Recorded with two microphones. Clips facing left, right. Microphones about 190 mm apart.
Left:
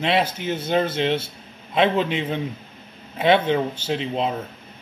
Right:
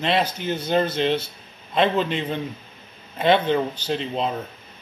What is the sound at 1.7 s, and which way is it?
A man's voice, 5° left (ahead or behind).